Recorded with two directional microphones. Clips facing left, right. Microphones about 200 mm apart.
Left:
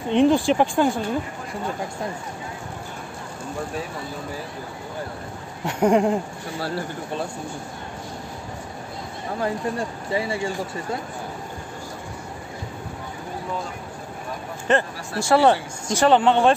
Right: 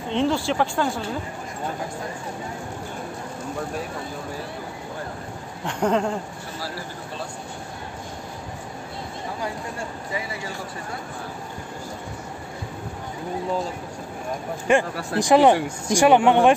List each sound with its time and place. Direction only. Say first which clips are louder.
0.1 s speech: left 5 dB; 15° left (ahead or behind)
5.7 s speech: left 4 dB; 10° left (ahead or behind)
10.1 s speech: left 8 dB; 30° left (ahead or behind)
14.7 s speech: right 2 dB; 10° right (ahead or behind)